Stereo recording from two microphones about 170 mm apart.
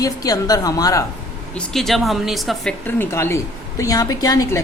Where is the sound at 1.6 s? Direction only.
Centre (ahead or behind).